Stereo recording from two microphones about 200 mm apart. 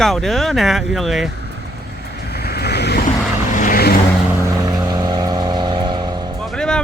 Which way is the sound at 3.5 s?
40° left (ahead or behind).